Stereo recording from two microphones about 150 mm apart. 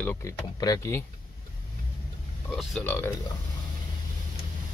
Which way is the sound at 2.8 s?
15° left (ahead or behind).